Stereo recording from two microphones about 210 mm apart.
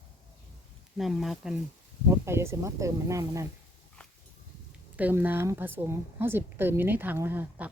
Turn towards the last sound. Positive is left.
turn(degrees=-10)  # may be behind; listen again after turning